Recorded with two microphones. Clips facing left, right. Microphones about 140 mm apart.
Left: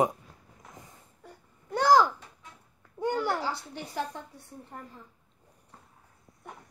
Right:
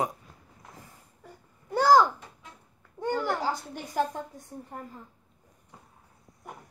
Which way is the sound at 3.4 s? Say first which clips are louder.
Right 3 dB; 40° right (ahead or behind).